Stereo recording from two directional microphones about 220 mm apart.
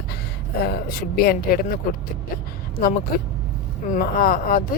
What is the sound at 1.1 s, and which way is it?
Speech, 45° left (ahead or behind).